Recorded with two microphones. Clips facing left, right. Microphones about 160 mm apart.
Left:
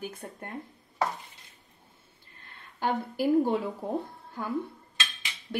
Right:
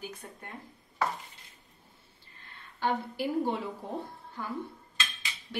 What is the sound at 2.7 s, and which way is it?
Speech, 45° left (ahead or behind).